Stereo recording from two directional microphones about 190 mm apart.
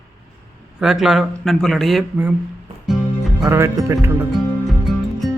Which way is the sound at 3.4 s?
15° right (ahead or behind).